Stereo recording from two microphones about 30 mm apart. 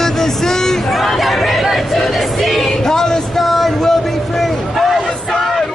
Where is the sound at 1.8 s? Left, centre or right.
Centre.